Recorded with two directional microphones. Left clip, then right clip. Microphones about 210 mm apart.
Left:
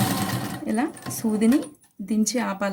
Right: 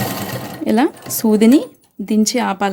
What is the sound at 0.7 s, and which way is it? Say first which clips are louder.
Speech: right 12 dB; 45° right (ahead or behind).